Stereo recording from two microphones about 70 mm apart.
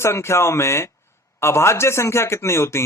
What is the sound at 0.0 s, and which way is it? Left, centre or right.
A man's voice, left.